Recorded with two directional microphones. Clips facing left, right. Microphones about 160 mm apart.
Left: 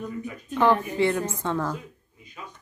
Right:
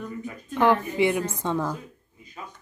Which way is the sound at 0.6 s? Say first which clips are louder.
Even; 15° right (ahead or behind).